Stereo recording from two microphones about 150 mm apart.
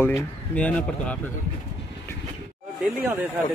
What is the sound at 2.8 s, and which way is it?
Speech, 15° right (ahead or behind).